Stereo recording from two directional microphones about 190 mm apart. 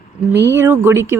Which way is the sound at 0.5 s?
10° right (ahead or behind).